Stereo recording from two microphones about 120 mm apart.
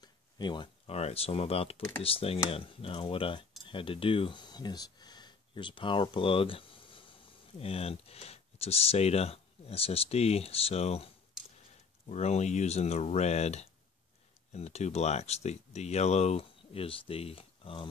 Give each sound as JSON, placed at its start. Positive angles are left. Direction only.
{"t": 0.0, "sound": "a sound", "side_deg": 40}
{"t": 0.8, "sound": "speech", "side_deg": 60}
{"t": 12.1, "sound": "speech", "side_deg": 65}